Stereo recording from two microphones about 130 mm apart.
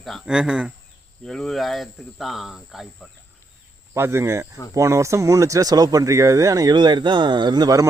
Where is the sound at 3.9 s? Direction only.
20° right (ahead or behind).